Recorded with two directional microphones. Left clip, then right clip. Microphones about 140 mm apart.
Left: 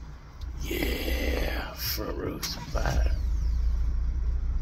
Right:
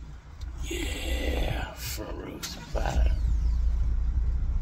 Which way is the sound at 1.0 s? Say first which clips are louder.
Left 2 dB; 15° right (ahead or behind).